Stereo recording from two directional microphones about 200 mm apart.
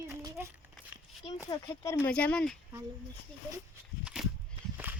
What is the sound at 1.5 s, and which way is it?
Speech, 20° left (ahead or behind).